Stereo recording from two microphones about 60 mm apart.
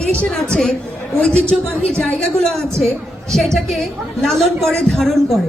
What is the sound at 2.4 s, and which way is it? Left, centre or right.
A woman's voice, centre.